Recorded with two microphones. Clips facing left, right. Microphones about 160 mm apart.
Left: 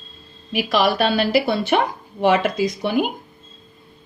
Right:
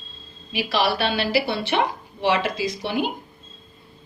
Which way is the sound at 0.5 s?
45° left (ahead or behind).